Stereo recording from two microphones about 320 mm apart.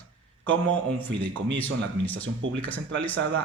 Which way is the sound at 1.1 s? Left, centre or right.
Right.